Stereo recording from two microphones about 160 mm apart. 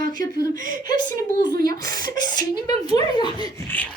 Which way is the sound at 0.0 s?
65° right (ahead or behind).